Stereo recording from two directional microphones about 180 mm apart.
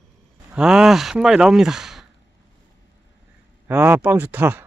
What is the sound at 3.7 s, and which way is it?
Speech, 10° right (ahead or behind).